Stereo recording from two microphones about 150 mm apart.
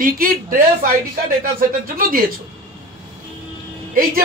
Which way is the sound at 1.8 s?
70° right (ahead or behind).